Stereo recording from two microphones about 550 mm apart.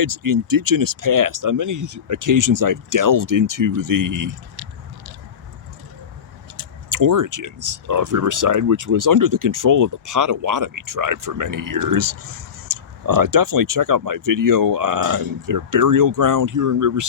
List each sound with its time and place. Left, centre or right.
0.0 s speech: right
6.6 s speech: right